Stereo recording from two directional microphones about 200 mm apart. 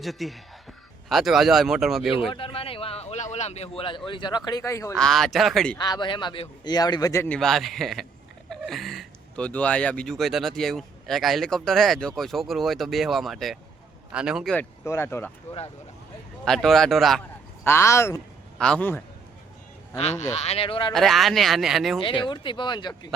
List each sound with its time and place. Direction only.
0.0 s speech: centre (ahead or behind)
2.3 s speech: 25° left (ahead or behind)
4.9 s speech: centre (ahead or behind)
5.8 s a man's voice: 20° left (ahead or behind)
7.3 s speech: centre (ahead or behind)
16.4 s speech: centre (ahead or behind)
20.0 s a man's voice: 35° left (ahead or behind)
20.9 s speech: centre (ahead or behind)
22.0 s a man's voice: 25° left (ahead or behind)